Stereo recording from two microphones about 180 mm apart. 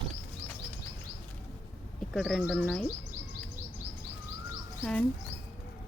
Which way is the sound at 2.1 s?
Centre (ahead or behind).